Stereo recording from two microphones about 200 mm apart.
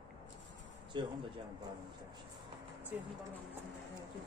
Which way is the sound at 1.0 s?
25° right (ahead or behind).